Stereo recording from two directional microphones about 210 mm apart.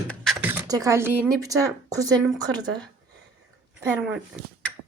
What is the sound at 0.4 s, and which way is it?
Speech, 15° right (ahead or behind).